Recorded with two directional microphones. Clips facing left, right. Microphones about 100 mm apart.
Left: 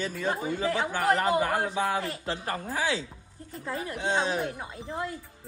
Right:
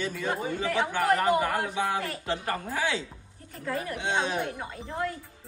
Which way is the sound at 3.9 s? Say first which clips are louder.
Left 2 dB; 35° left (ahead or behind).